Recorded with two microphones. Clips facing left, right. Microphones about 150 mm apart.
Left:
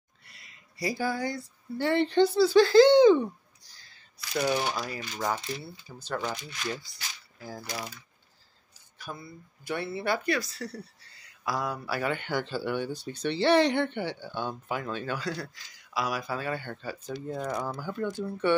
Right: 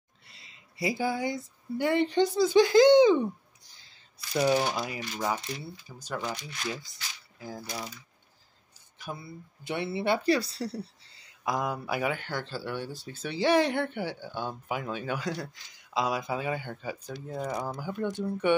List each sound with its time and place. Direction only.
0.3 s speech: 25° right (ahead or behind)
4.5 s speech: 25° right (ahead or behind)
4.8 s speech: 15° right (ahead or behind)
7.3 s mechanisms: 20° right (ahead or behind)
8.9 s speech: 20° right (ahead or behind)
12.1 s speech: centre (ahead or behind); by 18.6 s 15° right (ahead or behind)